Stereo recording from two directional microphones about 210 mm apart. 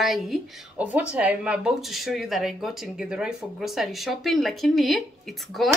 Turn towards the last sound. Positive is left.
turn(degrees=0)  # may be behind; listen again after turning